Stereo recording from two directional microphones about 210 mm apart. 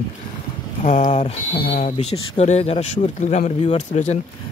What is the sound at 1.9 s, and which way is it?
Speech, 30° left (ahead or behind).